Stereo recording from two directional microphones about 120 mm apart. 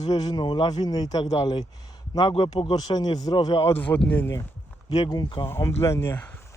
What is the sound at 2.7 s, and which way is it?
Speech, 35° left (ahead or behind).